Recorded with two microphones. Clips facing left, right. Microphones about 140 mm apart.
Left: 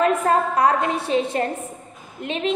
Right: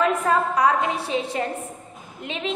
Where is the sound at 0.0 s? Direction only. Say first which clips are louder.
Left 2 dB; 45° left (ahead or behind).